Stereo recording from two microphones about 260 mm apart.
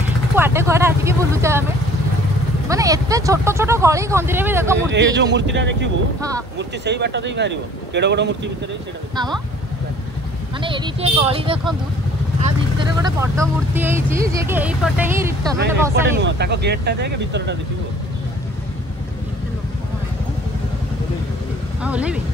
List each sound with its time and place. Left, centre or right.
0.4 s speech: centre
2.7 s speech: centre
4.9 s speech: right
10.6 s speech: centre
13.0 s speech: centre
15.9 s speech: right
21.8 s speech: centre